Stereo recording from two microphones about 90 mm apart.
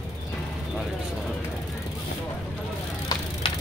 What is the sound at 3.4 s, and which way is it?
Vehicle, 85° left.